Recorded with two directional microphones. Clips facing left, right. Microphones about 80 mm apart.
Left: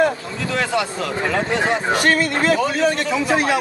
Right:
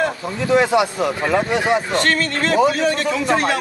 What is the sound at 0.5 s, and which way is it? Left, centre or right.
Speech, centre.